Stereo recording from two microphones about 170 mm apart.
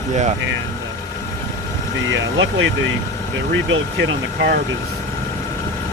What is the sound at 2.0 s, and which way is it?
Speech, 90° right.